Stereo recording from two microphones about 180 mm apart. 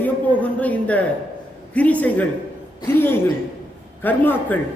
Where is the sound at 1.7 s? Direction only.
10° left (ahead or behind).